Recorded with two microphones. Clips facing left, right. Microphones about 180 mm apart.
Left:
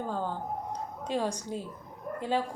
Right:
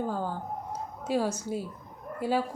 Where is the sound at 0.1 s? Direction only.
10° right (ahead or behind).